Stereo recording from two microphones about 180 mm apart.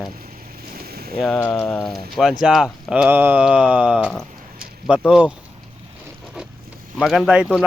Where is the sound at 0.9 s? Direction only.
60° right (ahead or behind).